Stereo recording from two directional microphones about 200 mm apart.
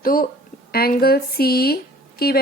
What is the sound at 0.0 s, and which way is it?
A woman's voice, 45° left (ahead or behind).